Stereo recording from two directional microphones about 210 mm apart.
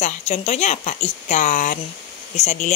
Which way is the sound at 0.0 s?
30° left (ahead or behind).